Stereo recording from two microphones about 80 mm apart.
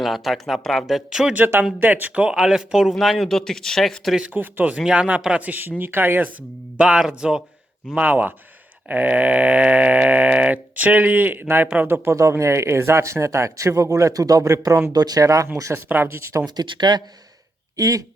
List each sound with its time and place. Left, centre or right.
0.0 s speech: centre
1.8 s speech: right; by 4.2 s centre
4.2 s music: right
4.8 s speech: centre
5.8 s music: right
6.7 s speech: centre
7.9 s music: right
12.0 s speech: right
15.7 s speech: right
16.6 s a man's voice: right
17.7 s speech: right